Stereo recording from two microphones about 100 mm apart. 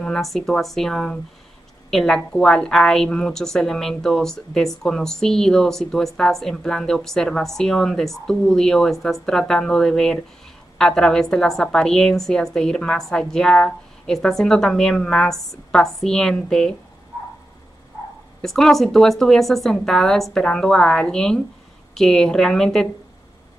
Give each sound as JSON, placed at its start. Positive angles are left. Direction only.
{"t": 0.0, "sound": "a woman's voice", "side_deg": 5}
{"t": 18.4, "sound": "a woman's voice", "side_deg": 5}